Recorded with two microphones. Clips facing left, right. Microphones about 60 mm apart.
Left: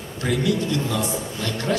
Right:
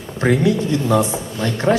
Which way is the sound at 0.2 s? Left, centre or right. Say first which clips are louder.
Right 6 dB; right.